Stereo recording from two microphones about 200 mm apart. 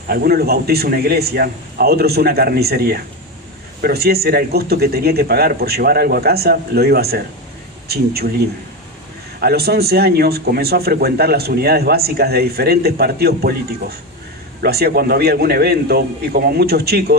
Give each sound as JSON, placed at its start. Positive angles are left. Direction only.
{"t": 0.1, "sound": "a man's voice", "side_deg": -50}
{"t": 9.4, "sound": "a man's voice", "side_deg": -50}